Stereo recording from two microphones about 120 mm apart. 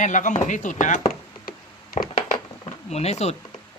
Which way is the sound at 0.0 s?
90° left.